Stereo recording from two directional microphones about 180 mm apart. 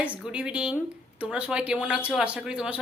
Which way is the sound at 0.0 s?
5° right (ahead or behind).